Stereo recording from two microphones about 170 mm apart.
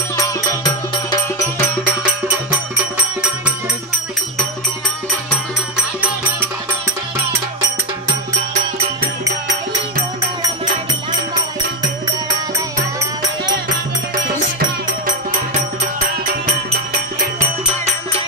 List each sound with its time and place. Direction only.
0.1 s music: 20° left (ahead or behind)